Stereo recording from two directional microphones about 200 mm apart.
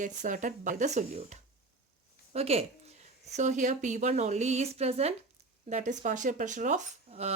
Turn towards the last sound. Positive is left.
turn(degrees=-35)  # may be behind; listen again after turning